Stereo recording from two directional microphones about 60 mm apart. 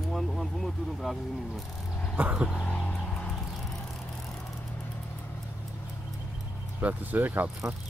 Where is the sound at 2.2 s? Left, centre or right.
Right.